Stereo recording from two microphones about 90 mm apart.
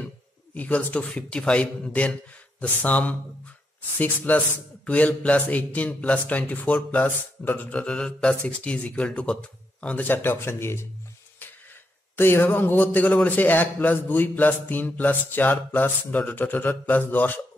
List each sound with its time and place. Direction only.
0.6 s a man's voice: 15° left (ahead or behind)
12.2 s a man's voice: 25° left (ahead or behind)